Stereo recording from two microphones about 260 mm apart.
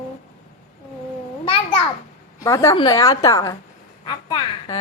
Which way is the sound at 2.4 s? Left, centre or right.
Centre.